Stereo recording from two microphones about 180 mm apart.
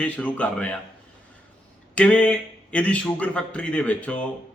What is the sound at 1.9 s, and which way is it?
A man's voice, 5° left (ahead or behind).